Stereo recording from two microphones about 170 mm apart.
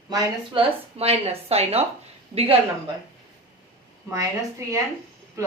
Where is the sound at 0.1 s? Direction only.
25° right (ahead or behind).